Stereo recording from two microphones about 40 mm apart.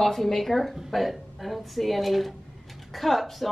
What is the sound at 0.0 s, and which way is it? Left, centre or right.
A woman's voice, centre.